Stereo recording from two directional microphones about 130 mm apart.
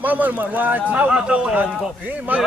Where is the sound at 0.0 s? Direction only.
10° right (ahead or behind).